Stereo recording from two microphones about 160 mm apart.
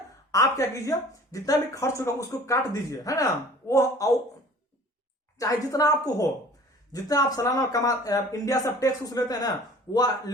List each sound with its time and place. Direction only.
0.3 s speech: 20° left (ahead or behind)
5.4 s speech: 20° left (ahead or behind)